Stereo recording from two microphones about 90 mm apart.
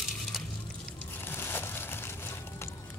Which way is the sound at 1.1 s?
25° left (ahead or behind).